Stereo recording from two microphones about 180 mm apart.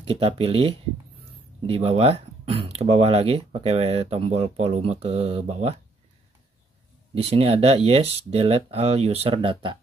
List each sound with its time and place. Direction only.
0.0 s speech: 35° right (ahead or behind)
7.2 s speech: 35° right (ahead or behind)